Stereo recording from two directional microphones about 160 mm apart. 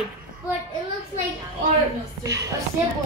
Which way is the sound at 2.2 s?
20° right (ahead or behind).